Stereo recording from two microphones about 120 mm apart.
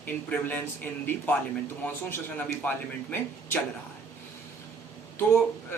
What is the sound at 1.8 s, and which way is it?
Speech, 15° left (ahead or behind).